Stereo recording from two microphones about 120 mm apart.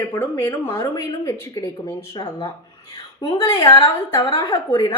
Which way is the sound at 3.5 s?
25° left (ahead or behind).